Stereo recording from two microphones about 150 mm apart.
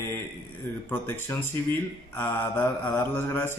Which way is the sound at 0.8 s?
15° left (ahead or behind).